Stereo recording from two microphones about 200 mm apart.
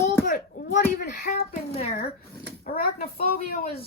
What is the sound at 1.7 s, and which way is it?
Speech, 30° left (ahead or behind).